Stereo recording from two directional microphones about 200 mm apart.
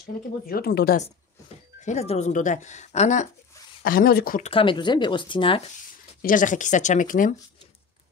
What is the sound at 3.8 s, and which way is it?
Speech, 45° left (ahead or behind).